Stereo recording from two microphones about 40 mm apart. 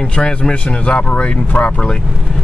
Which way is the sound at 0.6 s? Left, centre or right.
Left.